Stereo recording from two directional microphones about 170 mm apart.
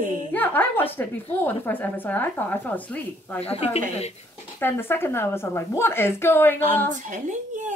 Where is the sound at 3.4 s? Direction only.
35° left (ahead or behind).